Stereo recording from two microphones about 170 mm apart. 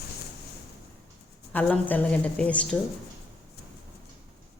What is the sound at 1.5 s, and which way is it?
A woman's voice, 10° left (ahead or behind).